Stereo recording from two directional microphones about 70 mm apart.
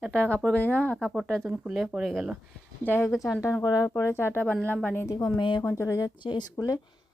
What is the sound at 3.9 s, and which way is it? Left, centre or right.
Speech, left.